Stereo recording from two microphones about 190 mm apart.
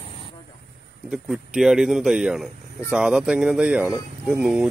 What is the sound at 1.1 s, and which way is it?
Speech, centre (ahead or behind).